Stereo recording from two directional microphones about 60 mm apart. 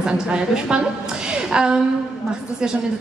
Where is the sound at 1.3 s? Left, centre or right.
Centre.